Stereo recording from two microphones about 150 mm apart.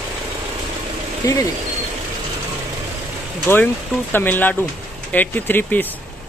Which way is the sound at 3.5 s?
15° left (ahead or behind).